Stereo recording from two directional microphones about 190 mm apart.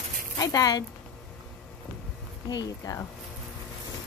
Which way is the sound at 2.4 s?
20° left (ahead or behind).